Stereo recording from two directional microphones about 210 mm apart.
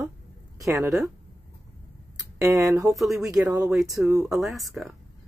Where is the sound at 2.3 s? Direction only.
15° right (ahead or behind).